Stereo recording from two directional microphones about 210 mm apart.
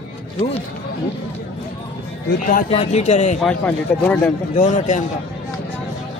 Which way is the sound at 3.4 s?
5° left (ahead or behind).